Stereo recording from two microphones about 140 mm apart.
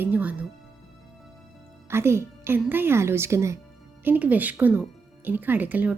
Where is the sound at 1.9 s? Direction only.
20° right (ahead or behind).